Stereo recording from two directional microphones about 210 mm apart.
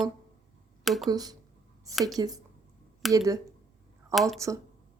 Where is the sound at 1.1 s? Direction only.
20° right (ahead or behind).